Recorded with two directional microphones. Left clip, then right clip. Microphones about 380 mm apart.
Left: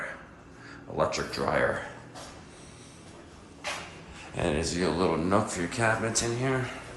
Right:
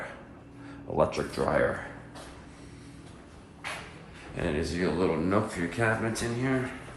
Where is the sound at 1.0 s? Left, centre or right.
Centre.